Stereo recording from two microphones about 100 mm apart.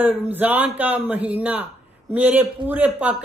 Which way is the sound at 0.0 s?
15° right (ahead or behind).